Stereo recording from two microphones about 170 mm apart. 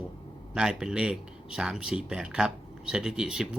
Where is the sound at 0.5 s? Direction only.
5° right (ahead or behind).